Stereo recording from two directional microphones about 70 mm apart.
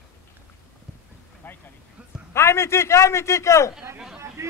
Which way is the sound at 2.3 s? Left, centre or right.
Left.